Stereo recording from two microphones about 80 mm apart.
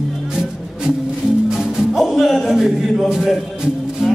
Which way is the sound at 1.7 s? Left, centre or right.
Centre.